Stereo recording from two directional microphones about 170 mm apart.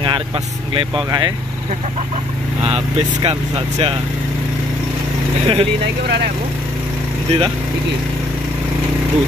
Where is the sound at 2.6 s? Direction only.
35° right (ahead or behind).